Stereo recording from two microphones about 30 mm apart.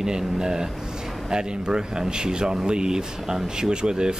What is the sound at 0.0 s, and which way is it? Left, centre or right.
Speech, right.